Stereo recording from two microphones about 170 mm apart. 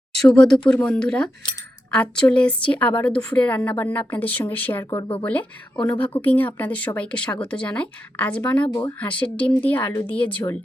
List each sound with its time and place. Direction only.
0.2 s a woman's voice: 5° left (ahead or behind)
4.9 s speech: 25° left (ahead or behind)
5.2 s a woman's voice: 10° left (ahead or behind)
5.7 s speech: 25° left (ahead or behind)
6.2 s a woman's voice: 10° left (ahead or behind)